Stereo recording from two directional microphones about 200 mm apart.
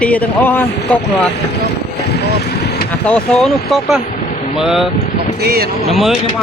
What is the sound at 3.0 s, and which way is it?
A man's voice, 5° left (ahead or behind).